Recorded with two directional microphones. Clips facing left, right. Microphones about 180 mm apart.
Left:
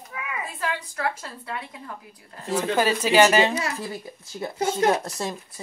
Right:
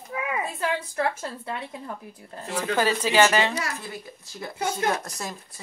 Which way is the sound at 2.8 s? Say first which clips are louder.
Left 2 dB; 15° left (ahead or behind).